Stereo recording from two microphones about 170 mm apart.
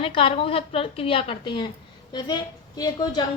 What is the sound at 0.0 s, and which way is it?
A woman's voice, 35° left (ahead or behind).